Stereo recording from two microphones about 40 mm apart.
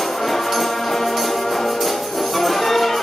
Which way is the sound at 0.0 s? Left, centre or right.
Centre.